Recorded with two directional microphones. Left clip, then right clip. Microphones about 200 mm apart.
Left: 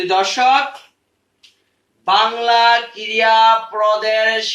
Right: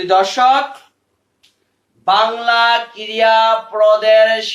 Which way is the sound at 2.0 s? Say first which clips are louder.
Right 1 dB; 10° right (ahead or behind).